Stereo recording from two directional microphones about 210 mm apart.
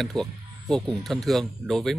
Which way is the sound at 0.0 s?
Centre (ahead or behind).